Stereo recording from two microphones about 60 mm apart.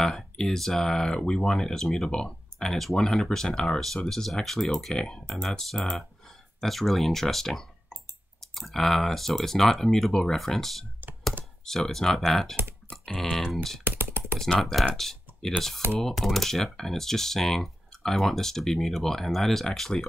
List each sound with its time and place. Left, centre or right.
0.0 s speech: centre
13.8 s typing: right
14.6 s speech: centre